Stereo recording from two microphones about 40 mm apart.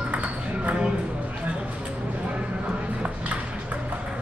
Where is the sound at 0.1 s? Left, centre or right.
Right.